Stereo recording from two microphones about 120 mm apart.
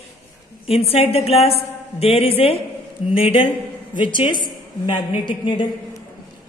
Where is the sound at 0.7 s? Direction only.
55° left (ahead or behind).